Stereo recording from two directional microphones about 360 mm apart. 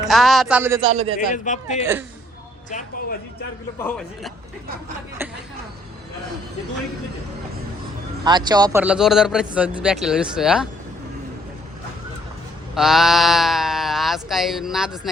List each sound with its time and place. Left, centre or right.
0.0 s speech: centre
1.3 s speech: centre
1.8 s speech: centre
2.6 s speech: left
3.8 s speech: centre
8.2 s speech: centre
12.7 s speech: centre